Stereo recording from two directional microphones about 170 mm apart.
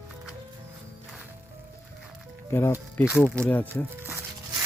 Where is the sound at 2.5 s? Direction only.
15° left (ahead or behind).